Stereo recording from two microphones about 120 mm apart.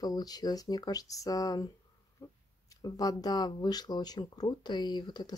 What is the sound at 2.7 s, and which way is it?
Speech, 30° left (ahead or behind).